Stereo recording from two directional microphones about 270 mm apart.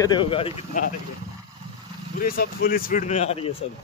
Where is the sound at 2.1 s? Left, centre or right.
Left.